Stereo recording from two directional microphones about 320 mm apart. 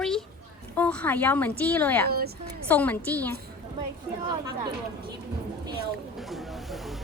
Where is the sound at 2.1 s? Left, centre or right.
Right.